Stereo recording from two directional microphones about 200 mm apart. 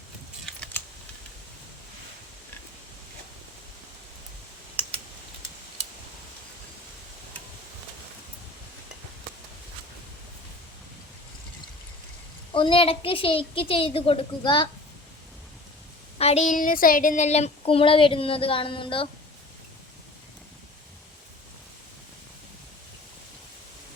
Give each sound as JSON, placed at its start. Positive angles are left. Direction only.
{"t": 12.5, "sound": "a woman's voice", "side_deg": 25}
{"t": 16.1, "sound": "a woman's voice", "side_deg": 30}